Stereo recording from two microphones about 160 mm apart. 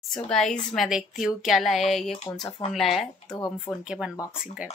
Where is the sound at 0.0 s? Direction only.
5° left (ahead or behind).